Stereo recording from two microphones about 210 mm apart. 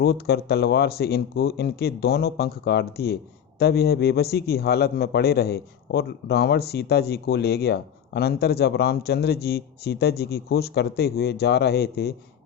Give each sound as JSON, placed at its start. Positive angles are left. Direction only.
{"t": 0.0, "sound": "a man's voice", "side_deg": 50}